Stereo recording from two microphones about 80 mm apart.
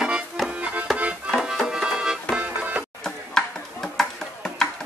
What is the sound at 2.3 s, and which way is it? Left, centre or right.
Music, centre.